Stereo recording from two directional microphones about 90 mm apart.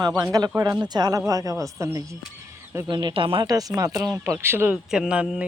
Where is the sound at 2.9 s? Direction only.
55° right (ahead or behind); by 3.4 s 75° right (ahead or behind).